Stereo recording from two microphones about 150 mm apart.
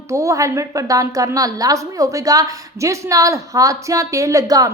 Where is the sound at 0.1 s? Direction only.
20° right (ahead or behind).